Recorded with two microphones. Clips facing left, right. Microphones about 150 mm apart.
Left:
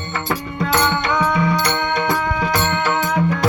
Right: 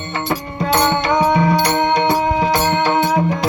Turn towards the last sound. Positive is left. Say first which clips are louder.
# right 3 dB
turn(degrees=-30)  # may be behind; listen again after turning